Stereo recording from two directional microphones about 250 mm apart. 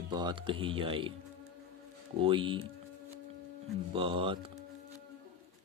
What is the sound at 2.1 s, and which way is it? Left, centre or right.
Speech, right.